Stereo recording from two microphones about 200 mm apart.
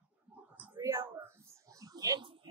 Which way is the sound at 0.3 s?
10° right (ahead or behind).